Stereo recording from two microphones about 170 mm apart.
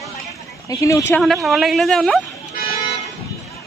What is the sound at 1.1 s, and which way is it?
Speech, 5° left (ahead or behind).